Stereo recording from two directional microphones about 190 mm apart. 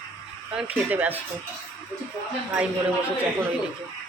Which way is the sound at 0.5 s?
10° right (ahead or behind).